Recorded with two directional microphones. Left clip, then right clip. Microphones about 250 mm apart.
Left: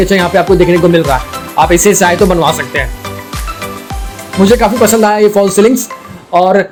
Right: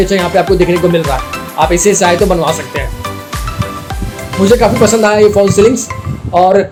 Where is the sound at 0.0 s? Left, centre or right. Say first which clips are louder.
Left 1 dB; left.